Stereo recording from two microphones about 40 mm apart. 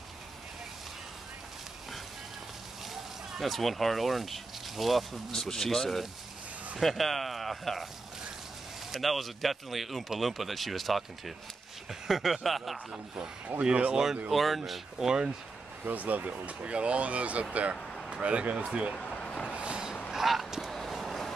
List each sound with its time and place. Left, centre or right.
2.9 s speech: centre
8.9 s speech: centre
13.6 s speech: right
14.3 s speech: centre
14.7 s speech: centre
15.8 s speech: right
18.9 s vehicle: left
19.5 s vehicle: right
20.1 s honk: centre
20.9 s vehicle: centre